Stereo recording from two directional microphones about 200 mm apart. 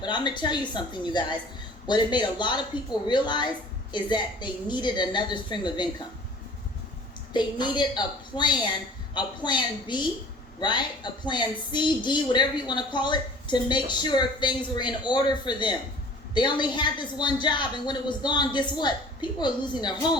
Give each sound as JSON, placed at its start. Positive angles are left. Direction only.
{"t": 0.0, "sound": "a woman's voice", "side_deg": 20}
{"t": 7.3, "sound": "a woman's voice", "side_deg": 25}